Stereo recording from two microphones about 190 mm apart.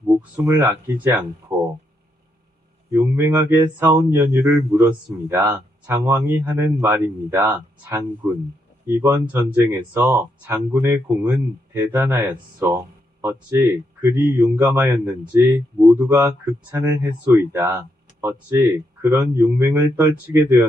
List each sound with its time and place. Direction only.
0.2 s speech: 10° right (ahead or behind)
2.9 s speech: 10° right (ahead or behind)